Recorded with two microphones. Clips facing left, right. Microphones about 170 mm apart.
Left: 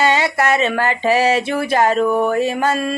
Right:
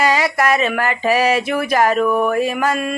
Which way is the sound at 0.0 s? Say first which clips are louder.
Even; 25° left (ahead or behind).